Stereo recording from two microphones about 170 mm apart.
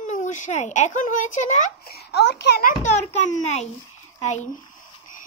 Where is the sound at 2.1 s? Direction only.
80° left.